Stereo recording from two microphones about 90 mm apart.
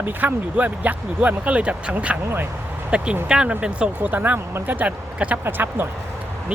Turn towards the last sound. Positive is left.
turn(degrees=-25)  # may be behind; listen again after turning